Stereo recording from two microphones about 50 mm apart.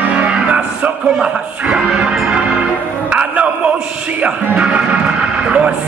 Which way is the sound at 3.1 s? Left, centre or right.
Right.